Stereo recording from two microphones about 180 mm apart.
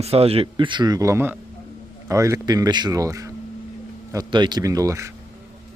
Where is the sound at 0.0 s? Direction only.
35° right (ahead or behind); by 5.1 s 15° right (ahead or behind).